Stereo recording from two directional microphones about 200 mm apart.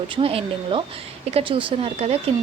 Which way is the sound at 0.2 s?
30° right (ahead or behind).